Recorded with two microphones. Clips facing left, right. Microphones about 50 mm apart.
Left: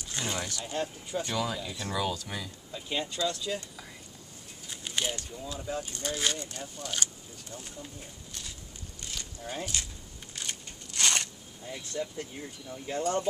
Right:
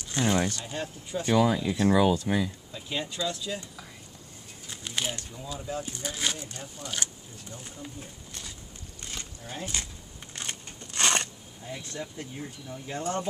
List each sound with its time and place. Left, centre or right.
0.1 s speech: centre
0.4 s speech: right
0.7 s speech: centre
1.2 s speech: right
2.7 s speech: centre
9.4 s speech: centre
10.3 s a sound: right
11.6 s speech: centre